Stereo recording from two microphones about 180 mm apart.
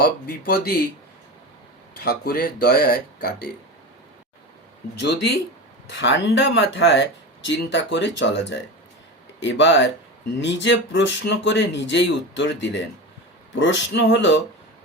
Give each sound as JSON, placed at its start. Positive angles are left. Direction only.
{"t": 0.0, "sound": "speech", "side_deg": 55}
{"t": 2.0, "sound": "speech", "side_deg": 60}
{"t": 4.9, "sound": "speech", "side_deg": 70}
{"t": 9.4, "sound": "speech", "side_deg": 90}